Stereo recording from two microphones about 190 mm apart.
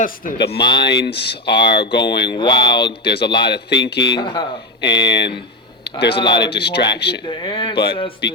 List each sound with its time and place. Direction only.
0.3 s speech: 60° left (ahead or behind)
2.3 s speech: 25° left (ahead or behind)
3.0 s speech: 60° left (ahead or behind)
4.1 s speech: 25° left (ahead or behind)
4.8 s speech: 65° left (ahead or behind)
6.1 s speech: 25° left (ahead or behind)
6.5 s speech: 60° left (ahead or behind)
7.3 s speech: 25° left (ahead or behind)